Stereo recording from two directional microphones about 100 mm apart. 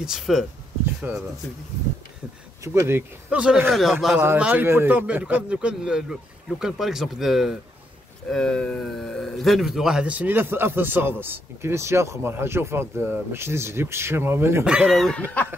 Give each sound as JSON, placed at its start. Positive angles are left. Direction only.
{"t": 0.0, "sound": "speech", "side_deg": -5}
{"t": 1.0, "sound": "speech", "side_deg": -20}
{"t": 2.6, "sound": "speech", "side_deg": -25}
{"t": 3.3, "sound": "a man's voice", "side_deg": -10}
{"t": 3.7, "sound": "speech", "side_deg": 0}
{"t": 4.2, "sound": "a man's voice", "side_deg": -15}
{"t": 14.6, "sound": "speech", "side_deg": -10}